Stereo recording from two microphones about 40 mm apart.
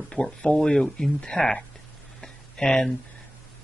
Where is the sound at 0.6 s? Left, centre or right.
Centre.